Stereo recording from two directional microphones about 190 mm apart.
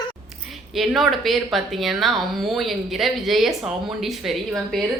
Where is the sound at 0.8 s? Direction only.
Centre (ahead or behind).